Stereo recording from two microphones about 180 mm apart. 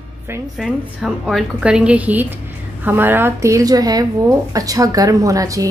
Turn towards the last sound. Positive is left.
turn(degrees=-20)  # may be behind; listen again after turning